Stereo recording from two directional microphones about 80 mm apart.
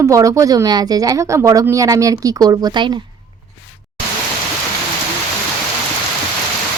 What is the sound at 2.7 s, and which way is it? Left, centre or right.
Speech, right.